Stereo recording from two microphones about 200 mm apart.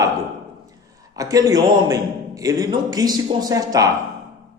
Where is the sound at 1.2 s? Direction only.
15° right (ahead or behind).